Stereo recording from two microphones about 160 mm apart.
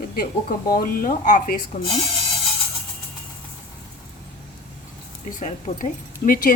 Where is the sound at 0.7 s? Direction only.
65° left (ahead or behind).